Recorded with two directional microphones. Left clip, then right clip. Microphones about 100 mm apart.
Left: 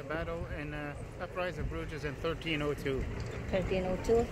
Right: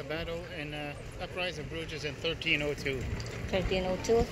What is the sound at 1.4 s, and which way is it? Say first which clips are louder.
Speech: right 2 dB; 40° left (ahead or behind).